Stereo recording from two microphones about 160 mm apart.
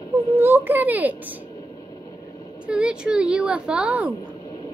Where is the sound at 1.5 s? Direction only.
25° left (ahead or behind).